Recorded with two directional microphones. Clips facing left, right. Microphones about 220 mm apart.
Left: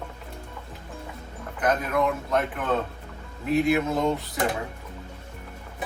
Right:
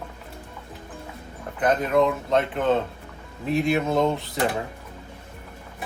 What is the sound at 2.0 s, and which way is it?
Speech, 25° right (ahead or behind).